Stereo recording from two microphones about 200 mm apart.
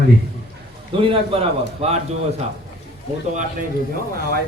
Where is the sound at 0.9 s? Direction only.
30° right (ahead or behind).